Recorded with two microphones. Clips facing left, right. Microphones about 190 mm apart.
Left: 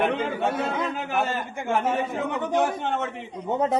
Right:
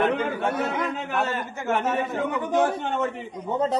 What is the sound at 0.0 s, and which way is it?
A man's voice, 25° left (ahead or behind).